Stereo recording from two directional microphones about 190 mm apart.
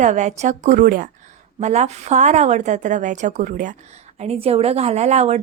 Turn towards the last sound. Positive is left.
turn(degrees=-35)  # may be behind; listen again after turning